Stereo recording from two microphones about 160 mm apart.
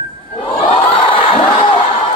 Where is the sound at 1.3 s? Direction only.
45° left (ahead or behind).